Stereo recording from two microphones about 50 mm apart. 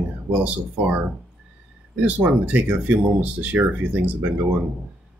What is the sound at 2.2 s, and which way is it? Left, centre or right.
Speech, right.